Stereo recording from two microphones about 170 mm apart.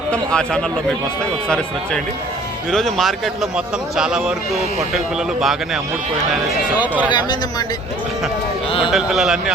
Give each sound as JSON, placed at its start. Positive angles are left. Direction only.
{"t": 0.1, "sound": "speech", "side_deg": 5}
{"t": 7.1, "sound": "speech", "side_deg": 25}
{"t": 8.9, "sound": "speech", "side_deg": 0}